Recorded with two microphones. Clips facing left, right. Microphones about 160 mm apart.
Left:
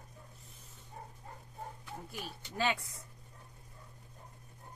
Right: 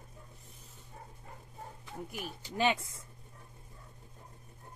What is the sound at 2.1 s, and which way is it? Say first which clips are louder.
Speech: right 3 dB; 20° right (ahead or behind).